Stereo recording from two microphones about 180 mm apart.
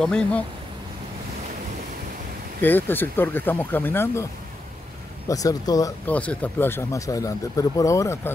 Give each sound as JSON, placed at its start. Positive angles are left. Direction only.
{"t": 0.0, "sound": "speech", "side_deg": 5}
{"t": 2.6, "sound": "speech", "side_deg": 10}
{"t": 5.3, "sound": "speech", "side_deg": 20}
{"t": 6.0, "sound": "speech", "side_deg": 10}